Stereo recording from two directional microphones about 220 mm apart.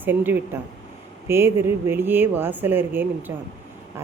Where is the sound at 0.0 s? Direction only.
10° right (ahead or behind).